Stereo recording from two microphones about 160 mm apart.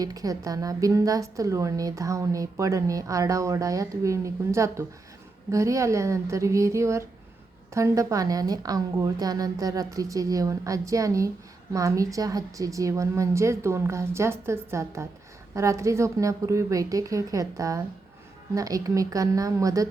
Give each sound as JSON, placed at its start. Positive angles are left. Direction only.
{"t": 0.0, "sound": "a woman's voice", "side_deg": -20}